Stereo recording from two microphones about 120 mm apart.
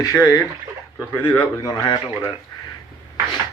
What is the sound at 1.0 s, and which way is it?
Speech, 15° left (ahead or behind).